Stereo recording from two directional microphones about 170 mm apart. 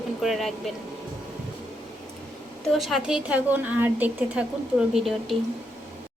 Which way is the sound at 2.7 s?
Centre (ahead or behind).